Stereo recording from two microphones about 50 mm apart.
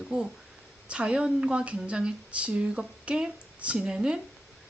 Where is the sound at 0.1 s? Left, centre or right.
Right.